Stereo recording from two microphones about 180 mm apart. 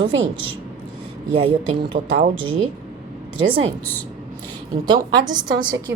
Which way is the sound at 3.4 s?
30° right (ahead or behind).